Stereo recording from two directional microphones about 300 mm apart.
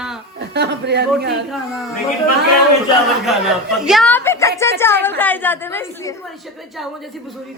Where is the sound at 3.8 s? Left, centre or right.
Centre.